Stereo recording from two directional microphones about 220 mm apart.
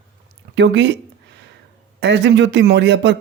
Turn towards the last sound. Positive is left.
turn(degrees=-55)  # may be behind; listen again after turning